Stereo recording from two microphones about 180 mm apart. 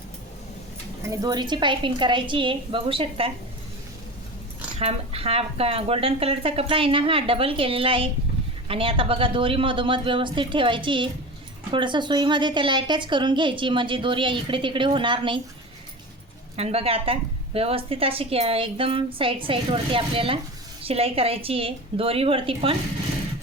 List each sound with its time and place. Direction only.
1.0 s a woman's voice: 20° right (ahead or behind)
4.8 s a woman's voice: 35° right (ahead or behind)
16.6 s a woman's voice: 35° right (ahead or behind)